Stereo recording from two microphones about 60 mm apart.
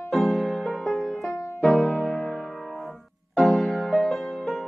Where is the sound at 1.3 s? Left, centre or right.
Left.